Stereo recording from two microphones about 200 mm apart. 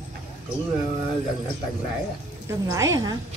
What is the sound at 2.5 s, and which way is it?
Speech, 15° right (ahead or behind).